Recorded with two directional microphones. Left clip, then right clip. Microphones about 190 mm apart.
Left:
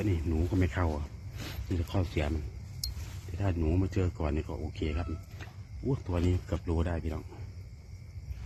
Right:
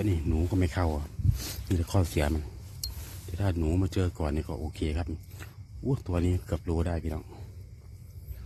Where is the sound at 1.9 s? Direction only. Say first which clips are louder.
Right 4 dB; 40° right (ahead or behind).